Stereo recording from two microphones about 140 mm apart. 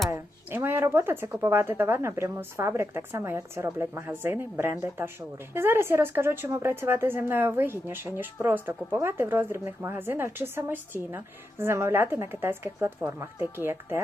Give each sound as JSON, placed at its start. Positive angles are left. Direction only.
{"t": 0.1, "sound": "a woman's voice", "side_deg": -15}